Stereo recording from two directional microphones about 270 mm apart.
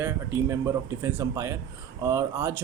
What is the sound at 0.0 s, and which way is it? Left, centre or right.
Speech, centre.